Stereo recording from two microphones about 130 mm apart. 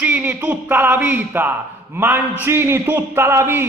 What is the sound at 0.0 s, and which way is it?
A man's voice, 15° right (ahead or behind).